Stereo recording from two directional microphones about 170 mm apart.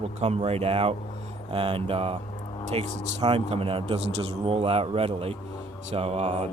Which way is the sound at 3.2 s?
35° right (ahead or behind).